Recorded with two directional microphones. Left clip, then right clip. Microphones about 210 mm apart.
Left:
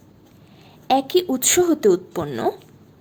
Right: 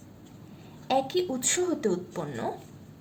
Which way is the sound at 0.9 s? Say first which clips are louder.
Left 8 dB; 50° left (ahead or behind).